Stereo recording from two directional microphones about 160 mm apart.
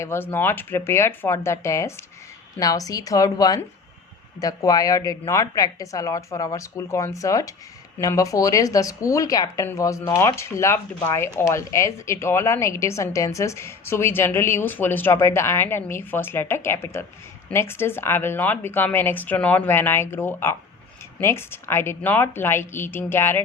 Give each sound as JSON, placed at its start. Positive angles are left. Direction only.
{"t": 0.0, "sound": "a woman's voice", "side_deg": 15}